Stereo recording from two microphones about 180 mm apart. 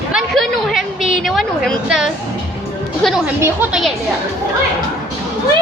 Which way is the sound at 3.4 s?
10° right (ahead or behind).